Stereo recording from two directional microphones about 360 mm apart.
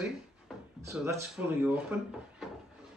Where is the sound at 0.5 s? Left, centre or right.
Centre.